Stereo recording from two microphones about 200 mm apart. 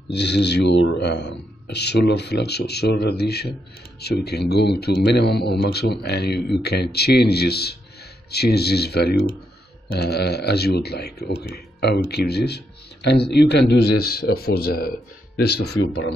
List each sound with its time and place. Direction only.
0.1 s a man's voice: 55° left (ahead or behind)
15.6 s speech: 80° left